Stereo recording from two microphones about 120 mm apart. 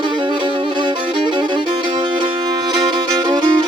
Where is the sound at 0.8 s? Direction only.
40° right (ahead or behind).